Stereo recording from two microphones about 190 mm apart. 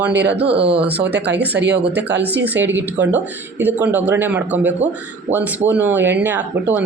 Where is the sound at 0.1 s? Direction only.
65° right (ahead or behind).